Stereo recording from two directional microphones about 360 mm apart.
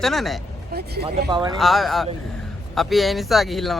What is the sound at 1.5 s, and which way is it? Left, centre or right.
Speech, centre.